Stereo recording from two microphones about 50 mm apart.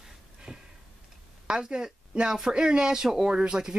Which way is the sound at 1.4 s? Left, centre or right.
Centre.